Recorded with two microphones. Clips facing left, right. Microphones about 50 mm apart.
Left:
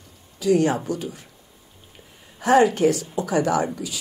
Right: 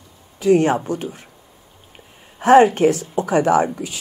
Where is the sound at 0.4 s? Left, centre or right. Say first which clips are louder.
Right 4 dB; right.